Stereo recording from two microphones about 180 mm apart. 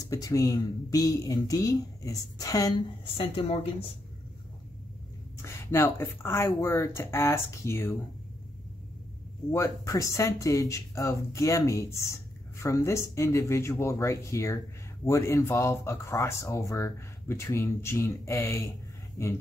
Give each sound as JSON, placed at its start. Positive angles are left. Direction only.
{"t": 0.0, "sound": "speech", "side_deg": 20}
{"t": 3.2, "sound": "a woman's voice", "side_deg": 30}
{"t": 5.4, "sound": "a woman's voice", "side_deg": 15}
{"t": 9.5, "sound": "speech", "side_deg": 15}